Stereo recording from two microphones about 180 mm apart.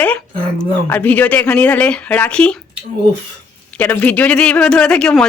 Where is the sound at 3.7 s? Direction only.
10° left (ahead or behind).